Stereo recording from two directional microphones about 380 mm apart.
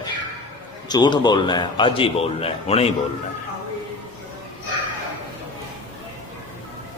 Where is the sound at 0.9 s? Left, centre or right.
Centre.